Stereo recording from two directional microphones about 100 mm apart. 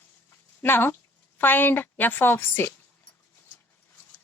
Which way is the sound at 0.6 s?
25° left (ahead or behind).